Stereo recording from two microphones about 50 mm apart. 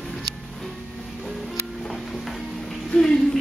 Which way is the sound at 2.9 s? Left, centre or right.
Centre.